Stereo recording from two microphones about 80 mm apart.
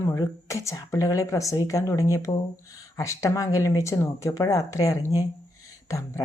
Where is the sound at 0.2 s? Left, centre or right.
Left.